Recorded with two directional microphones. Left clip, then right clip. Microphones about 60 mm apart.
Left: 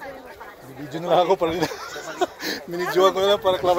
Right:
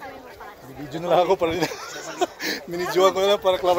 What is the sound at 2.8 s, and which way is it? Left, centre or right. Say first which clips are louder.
Speech: even; left.